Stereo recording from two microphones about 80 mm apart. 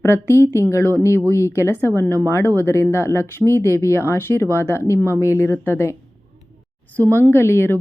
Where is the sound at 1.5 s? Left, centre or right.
Left.